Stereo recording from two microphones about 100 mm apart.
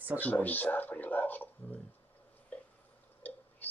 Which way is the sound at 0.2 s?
15° left (ahead or behind).